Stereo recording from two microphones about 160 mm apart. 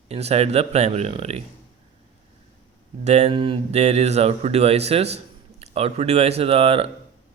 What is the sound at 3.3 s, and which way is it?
Speech, 30° right (ahead or behind).